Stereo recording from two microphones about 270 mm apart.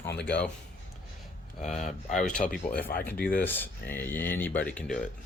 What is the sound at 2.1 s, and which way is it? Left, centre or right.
Speech, centre.